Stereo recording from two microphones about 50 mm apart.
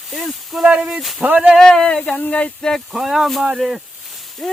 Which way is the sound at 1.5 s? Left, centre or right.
Centre.